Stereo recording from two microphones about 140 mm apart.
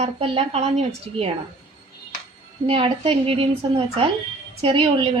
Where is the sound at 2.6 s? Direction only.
40° right (ahead or behind).